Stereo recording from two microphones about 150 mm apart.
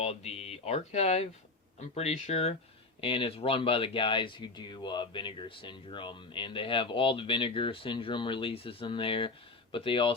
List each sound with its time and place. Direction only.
0.0 s speech: 45° left (ahead or behind)